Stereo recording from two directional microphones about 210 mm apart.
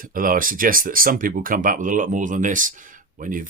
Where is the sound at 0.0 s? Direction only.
40° right (ahead or behind).